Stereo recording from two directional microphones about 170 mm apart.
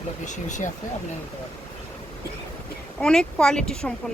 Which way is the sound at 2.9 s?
5° left (ahead or behind).